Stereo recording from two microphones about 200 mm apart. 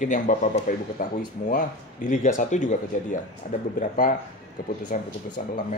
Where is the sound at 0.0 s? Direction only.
40° left (ahead or behind).